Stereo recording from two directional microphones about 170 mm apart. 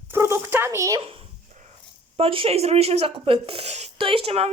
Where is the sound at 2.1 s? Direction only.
35° right (ahead or behind).